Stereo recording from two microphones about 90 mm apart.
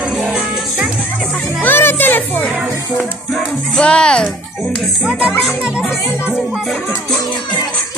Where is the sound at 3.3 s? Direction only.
10° left (ahead or behind).